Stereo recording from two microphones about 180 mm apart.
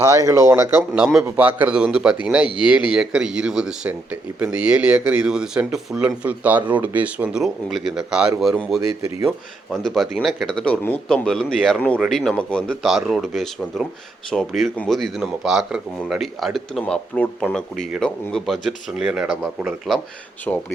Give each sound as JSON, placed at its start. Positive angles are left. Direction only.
{"t": 0.0, "sound": "a man's voice", "side_deg": -20}